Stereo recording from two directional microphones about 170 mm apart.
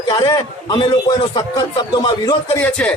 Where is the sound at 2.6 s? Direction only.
5° left (ahead or behind).